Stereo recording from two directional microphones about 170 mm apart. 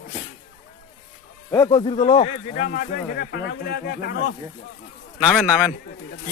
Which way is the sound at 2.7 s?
55° left (ahead or behind).